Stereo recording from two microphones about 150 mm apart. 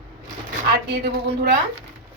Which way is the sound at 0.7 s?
90° right.